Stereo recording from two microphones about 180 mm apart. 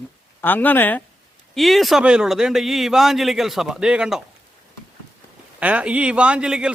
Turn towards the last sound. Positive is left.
turn(degrees=-5)  # may be behind; listen again after turning